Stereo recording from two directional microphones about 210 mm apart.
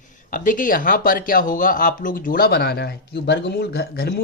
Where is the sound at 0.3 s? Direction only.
40° left (ahead or behind).